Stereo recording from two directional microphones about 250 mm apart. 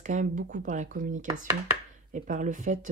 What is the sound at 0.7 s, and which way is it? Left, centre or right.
Speech, right.